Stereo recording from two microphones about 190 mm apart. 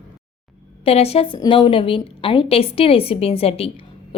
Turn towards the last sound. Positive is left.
turn(degrees=30)  # may be behind; listen again after turning